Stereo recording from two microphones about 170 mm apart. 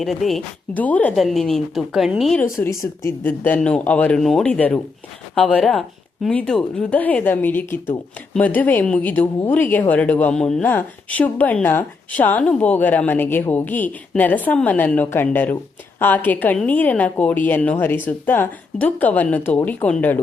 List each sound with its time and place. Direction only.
0.0 s a woman's voice: centre (ahead or behind)
2.4 s a woman's voice: 15° left (ahead or behind)